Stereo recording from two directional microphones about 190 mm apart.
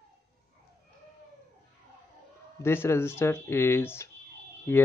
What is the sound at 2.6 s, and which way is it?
Speech, 10° left (ahead or behind).